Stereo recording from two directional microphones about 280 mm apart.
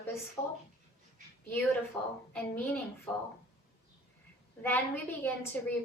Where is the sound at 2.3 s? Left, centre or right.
Centre.